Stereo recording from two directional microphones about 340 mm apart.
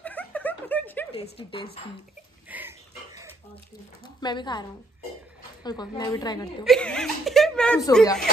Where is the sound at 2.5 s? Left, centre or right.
Centre.